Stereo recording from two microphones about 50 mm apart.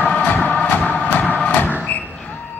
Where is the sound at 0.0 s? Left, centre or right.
Left.